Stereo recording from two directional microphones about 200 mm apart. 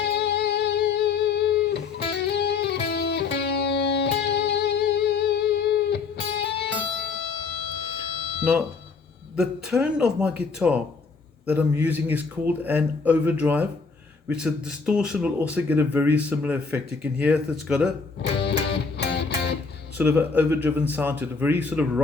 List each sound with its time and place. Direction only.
0.0 s music: 55° left (ahead or behind)
9.3 s speech: 5° right (ahead or behind)
18.3 s music: 55° left (ahead or behind)
20.0 s speech: 10° right (ahead or behind)